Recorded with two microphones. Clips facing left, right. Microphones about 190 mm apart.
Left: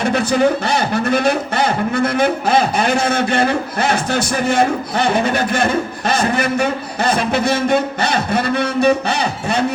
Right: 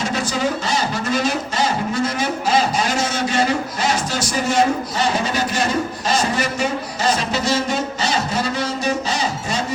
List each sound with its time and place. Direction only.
0.0 s a man's voice: 60° left (ahead or behind)